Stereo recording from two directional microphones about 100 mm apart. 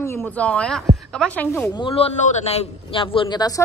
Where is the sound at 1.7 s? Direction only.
70° left (ahead or behind); by 3.0 s 90° left.